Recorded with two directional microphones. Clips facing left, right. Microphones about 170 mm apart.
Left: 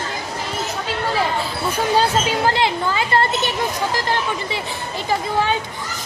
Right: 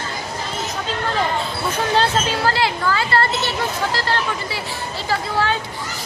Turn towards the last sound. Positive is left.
turn(degrees=15)  # may be behind; listen again after turning